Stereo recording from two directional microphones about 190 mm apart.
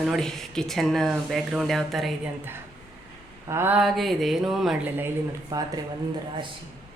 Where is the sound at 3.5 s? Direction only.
10° right (ahead or behind).